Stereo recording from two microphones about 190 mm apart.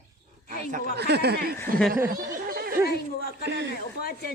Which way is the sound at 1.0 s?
60° right (ahead or behind).